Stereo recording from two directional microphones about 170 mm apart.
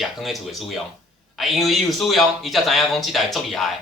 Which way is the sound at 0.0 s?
Centre (ahead or behind).